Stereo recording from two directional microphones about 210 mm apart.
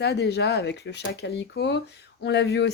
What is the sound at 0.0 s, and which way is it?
Speech, 50° left (ahead or behind).